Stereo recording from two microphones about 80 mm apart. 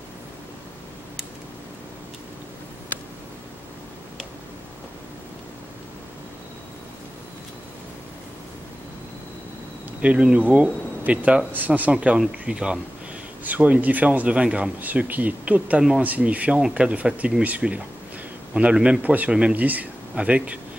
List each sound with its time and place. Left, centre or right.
10.0 s speech: centre